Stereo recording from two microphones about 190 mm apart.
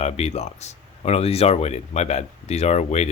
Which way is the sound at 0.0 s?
35° left (ahead or behind).